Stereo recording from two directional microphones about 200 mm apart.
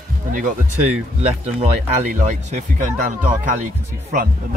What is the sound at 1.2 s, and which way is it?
Speech, 30° right (ahead or behind).